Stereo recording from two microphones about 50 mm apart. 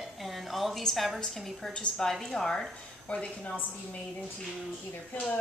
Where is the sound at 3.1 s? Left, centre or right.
Left.